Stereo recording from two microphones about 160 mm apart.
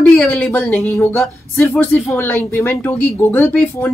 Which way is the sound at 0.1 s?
10° left (ahead or behind).